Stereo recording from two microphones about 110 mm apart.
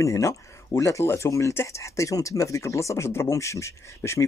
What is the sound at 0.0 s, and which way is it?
Speech, 25° left (ahead or behind).